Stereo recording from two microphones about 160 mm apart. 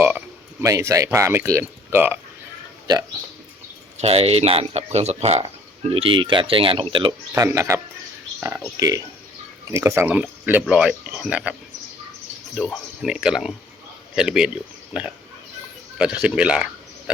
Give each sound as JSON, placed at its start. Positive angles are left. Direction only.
{"t": 0.6, "sound": "speech", "side_deg": -20}
{"t": 4.0, "sound": "speech", "side_deg": -40}
{"t": 7.3, "sound": "speech", "side_deg": -20}
{"t": 12.5, "sound": "speech", "side_deg": 0}